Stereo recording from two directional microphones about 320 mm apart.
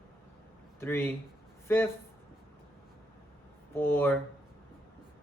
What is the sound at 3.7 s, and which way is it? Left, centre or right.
Speech, centre.